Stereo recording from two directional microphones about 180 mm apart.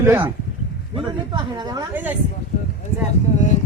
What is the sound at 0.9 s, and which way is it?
Speech, 25° right (ahead or behind).